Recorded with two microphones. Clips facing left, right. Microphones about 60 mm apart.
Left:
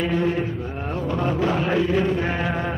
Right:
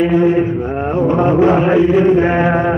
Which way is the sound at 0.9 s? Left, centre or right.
Right.